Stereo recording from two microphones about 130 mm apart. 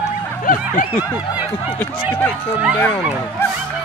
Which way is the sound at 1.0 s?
25° left (ahead or behind).